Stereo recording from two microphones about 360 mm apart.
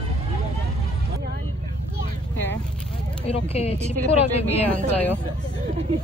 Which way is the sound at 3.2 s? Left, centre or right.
Centre.